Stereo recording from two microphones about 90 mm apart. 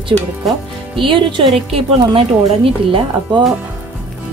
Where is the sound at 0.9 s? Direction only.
70° right (ahead or behind).